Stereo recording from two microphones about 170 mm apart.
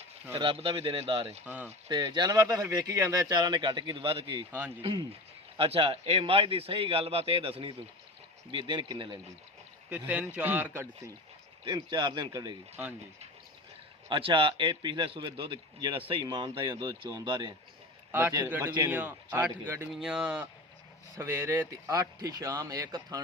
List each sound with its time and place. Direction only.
0.3 s a man's voice: 30° right (ahead or behind)
1.5 s speech: 10° right (ahead or behind)
1.9 s a man's voice: 25° right (ahead or behind)
10.1 s speech: 10° right (ahead or behind)
11.7 s a man's voice: 25° right (ahead or behind)
14.1 s a man's voice: 30° right (ahead or behind); by 19.9 s 15° right (ahead or behind)
19.9 s a man's voice: centre (ahead or behind); by 23.2 s 20° right (ahead or behind)